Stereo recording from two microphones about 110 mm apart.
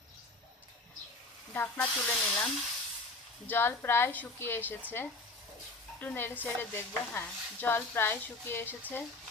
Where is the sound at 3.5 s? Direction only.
20° left (ahead or behind).